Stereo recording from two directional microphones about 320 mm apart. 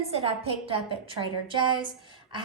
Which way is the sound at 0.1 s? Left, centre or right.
Centre.